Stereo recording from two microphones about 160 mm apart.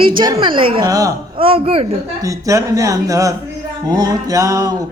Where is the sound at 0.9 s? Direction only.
20° right (ahead or behind).